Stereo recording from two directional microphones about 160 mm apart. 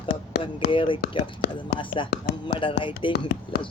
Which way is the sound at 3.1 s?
85° left.